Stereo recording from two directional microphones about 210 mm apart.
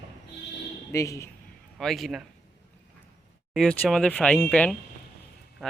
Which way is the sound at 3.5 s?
Centre (ahead or behind).